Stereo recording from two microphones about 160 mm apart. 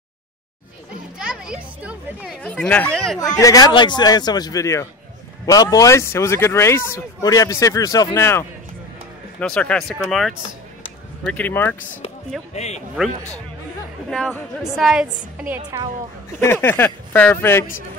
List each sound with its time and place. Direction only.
1.1 s speech: 5° right (ahead or behind)
3.3 s speech: 20° left (ahead or behind)
12.5 s speech: 45° left (ahead or behind)
14.1 s speech: 5° left (ahead or behind)
16.3 s speech: 15° left (ahead or behind)